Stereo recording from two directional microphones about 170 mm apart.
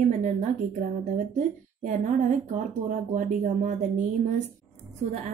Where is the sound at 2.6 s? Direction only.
50° right (ahead or behind).